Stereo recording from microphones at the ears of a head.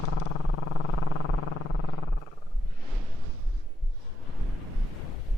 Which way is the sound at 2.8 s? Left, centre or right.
Right.